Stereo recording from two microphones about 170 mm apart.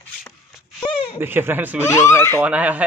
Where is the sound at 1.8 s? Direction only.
15° left (ahead or behind).